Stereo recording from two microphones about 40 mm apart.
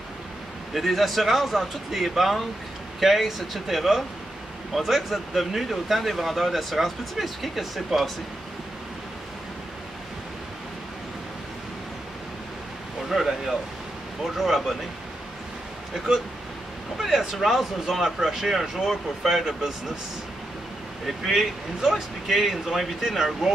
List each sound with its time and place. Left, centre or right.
0.7 s speech: centre
13.1 s speech: centre
17.0 s speech: centre
21.2 s speech: centre